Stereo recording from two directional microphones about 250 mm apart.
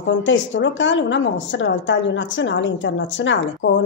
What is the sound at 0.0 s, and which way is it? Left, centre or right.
A woman's voice, left.